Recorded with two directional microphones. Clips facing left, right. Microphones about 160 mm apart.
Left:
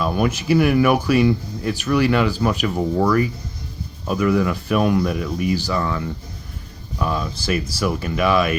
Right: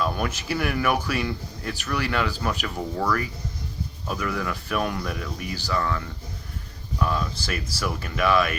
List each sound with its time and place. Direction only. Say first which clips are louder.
0.0 s speech: left 6 dB; 15° left (ahead or behind)
7.0 s speech: left 3 dB; 15° left (ahead or behind)